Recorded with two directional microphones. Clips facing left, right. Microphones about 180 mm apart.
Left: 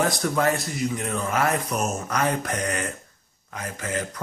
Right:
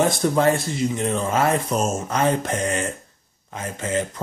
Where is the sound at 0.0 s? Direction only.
25° right (ahead or behind).